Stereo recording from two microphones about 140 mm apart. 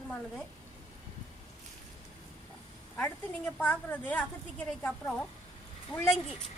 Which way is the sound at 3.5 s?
10° left (ahead or behind).